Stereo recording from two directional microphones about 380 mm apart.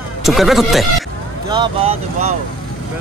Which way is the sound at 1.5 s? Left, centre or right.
Centre.